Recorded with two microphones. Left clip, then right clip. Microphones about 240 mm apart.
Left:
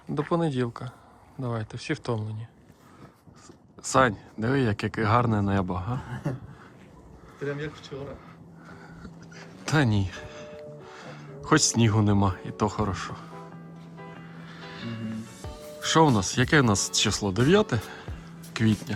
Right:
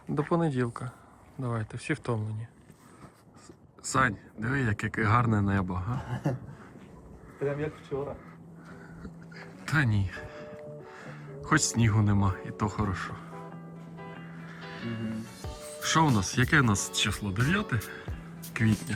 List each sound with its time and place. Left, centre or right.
0.1 s speech: centre
3.8 s speech: centre
6.3 s speech: right
9.3 s music: centre
11.4 s speech: centre
18.0 s music: centre